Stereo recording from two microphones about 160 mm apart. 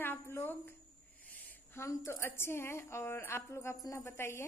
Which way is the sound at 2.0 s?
15° left (ahead or behind).